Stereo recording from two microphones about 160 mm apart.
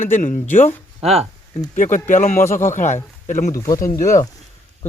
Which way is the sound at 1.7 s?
50° left (ahead or behind).